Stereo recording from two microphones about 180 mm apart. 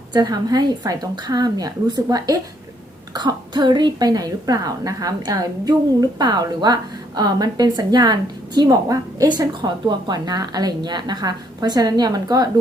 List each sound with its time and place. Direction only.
0.1 s a woman's voice: 25° right (ahead or behind)